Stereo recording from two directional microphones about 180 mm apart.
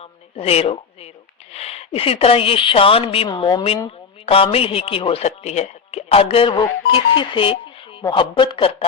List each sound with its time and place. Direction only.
0.3 s speech: 35° left (ahead or behind)